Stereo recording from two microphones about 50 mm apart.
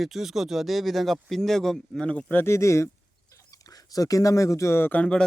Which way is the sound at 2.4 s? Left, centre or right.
Left.